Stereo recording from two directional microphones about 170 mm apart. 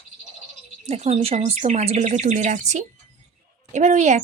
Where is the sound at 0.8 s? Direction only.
40° right (ahead or behind).